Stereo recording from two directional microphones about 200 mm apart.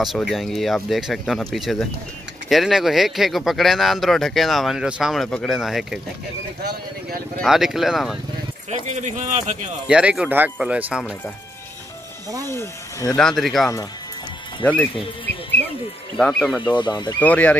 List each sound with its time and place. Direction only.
0.0 s speech: centre (ahead or behind)
6.6 s speech: 50° right (ahead or behind)
7.4 s speech: centre (ahead or behind)
8.6 s speech: 35° right (ahead or behind)
9.8 s speech: 5° right (ahead or behind)
12.4 s speech: 15° left (ahead or behind)
13.4 s speech: centre (ahead or behind)
16.2 s speech: 5° left (ahead or behind)
16.6 s speech: 20° left (ahead or behind)
17.2 s speech: 10° left (ahead or behind)